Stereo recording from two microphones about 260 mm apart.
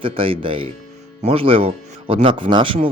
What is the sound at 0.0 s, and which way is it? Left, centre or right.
Speech, centre.